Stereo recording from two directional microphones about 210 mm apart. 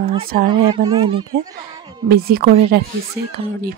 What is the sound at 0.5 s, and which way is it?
Speech, 20° right (ahead or behind).